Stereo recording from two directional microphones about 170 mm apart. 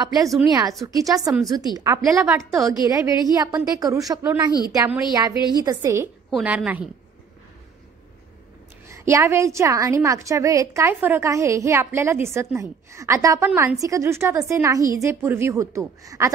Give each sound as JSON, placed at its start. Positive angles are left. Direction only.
{"t": 0.5, "sound": "a woman's voice", "side_deg": -20}
{"t": 4.5, "sound": "speech", "side_deg": 25}
{"t": 4.7, "sound": "a woman's voice", "side_deg": -15}
{"t": 6.3, "sound": "a woman's voice", "side_deg": -10}
{"t": 8.8, "sound": "a woman's voice", "side_deg": -15}